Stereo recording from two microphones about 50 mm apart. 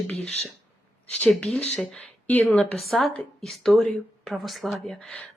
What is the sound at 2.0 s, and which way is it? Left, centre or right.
Speech, left.